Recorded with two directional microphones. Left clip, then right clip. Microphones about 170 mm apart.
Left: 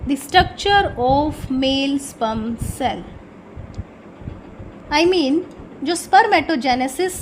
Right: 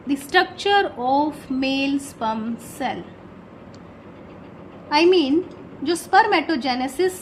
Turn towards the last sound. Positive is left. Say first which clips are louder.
# left 3 dB
turn(degrees=25)  # may be behind; listen again after turning